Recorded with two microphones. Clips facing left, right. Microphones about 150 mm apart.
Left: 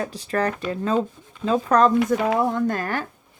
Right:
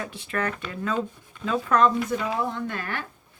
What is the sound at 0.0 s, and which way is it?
Speech, 40° left (ahead or behind).